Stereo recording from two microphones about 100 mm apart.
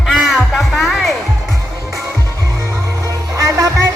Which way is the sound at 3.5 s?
30° right (ahead or behind).